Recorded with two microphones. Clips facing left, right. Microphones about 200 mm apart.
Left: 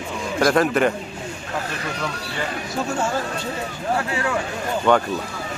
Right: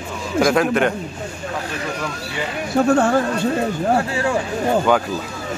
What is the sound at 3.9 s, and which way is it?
Speech, 30° right (ahead or behind).